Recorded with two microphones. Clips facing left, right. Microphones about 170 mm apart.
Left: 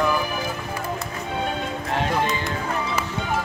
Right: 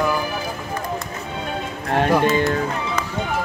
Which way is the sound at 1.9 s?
55° right (ahead or behind).